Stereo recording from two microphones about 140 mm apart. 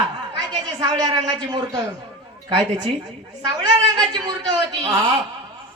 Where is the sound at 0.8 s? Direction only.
30° right (ahead or behind).